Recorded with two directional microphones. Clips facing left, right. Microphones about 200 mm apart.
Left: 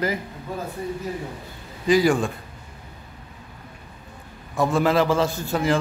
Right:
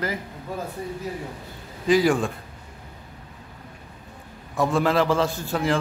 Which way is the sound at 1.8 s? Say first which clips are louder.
Left 1 dB; centre (ahead or behind).